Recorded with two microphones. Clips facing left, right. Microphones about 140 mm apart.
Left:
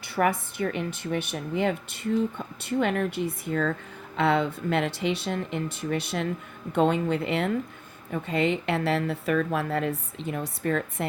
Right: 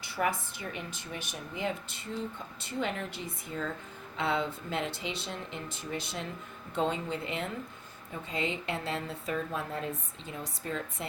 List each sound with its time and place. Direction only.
0.0 s a woman's voice: 60° left (ahead or behind)